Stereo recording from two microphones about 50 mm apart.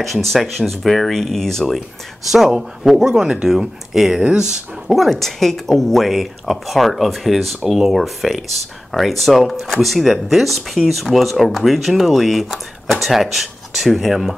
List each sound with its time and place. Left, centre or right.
0.0 s speech: centre
2.3 s speech: centre
4.2 s speech: right
4.5 s speech: centre